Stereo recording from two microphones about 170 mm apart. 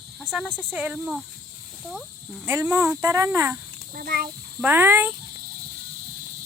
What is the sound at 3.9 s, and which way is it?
Speech, 60° right (ahead or behind).